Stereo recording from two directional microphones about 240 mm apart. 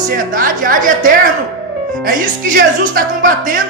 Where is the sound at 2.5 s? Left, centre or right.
Right.